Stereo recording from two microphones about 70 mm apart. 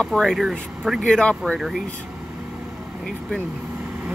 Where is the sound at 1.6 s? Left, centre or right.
Centre.